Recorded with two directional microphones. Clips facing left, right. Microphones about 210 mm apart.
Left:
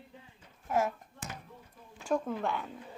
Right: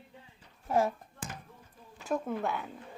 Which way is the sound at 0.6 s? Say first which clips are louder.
Right 2 dB; 30° right (ahead or behind).